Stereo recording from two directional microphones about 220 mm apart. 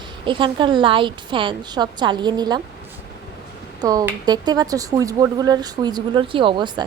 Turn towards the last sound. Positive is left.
turn(degrees=-20)  # may be behind; listen again after turning